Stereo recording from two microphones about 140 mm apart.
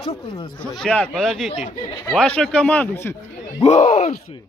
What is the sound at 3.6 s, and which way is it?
Speech, 50° left (ahead or behind).